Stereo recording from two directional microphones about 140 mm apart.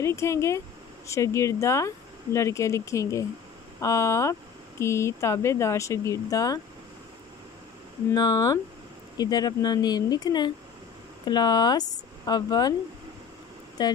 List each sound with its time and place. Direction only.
0.0 s speech: 20° left (ahead or behind)
8.1 s speech: 25° left (ahead or behind)
13.8 s speech: 30° left (ahead or behind)